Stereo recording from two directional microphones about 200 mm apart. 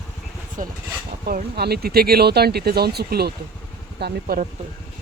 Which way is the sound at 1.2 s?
50° right (ahead or behind).